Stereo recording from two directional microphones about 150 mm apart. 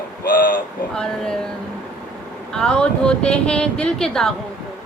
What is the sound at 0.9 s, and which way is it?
Speech, 5° left (ahead or behind).